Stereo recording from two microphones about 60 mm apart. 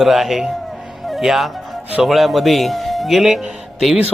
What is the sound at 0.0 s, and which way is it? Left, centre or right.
A man's voice, centre.